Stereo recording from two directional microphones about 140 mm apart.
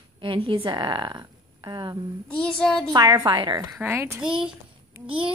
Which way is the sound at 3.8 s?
20° right (ahead or behind).